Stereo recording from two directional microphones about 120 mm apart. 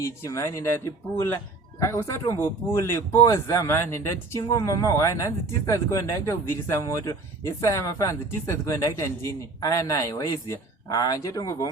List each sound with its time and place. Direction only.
0.0 s speech: 25° left (ahead or behind)
1.8 s speech: 25° left (ahead or behind)